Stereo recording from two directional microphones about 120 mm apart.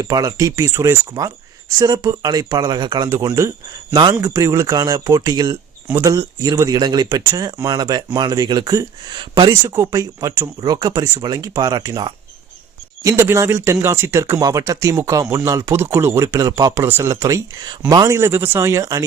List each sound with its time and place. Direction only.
0.0 s speech: 30° right (ahead or behind)
3.1 s speech: 30° right (ahead or behind)
4.2 s speech: 25° right (ahead or behind)
9.5 s speech: 30° right (ahead or behind)